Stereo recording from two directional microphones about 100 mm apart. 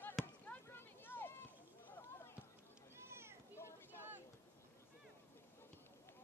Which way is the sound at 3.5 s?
25° left (ahead or behind).